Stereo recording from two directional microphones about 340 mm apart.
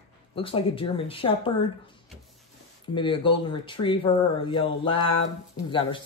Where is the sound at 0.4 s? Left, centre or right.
Centre.